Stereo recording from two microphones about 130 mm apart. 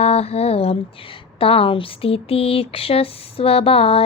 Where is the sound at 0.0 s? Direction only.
50° left (ahead or behind).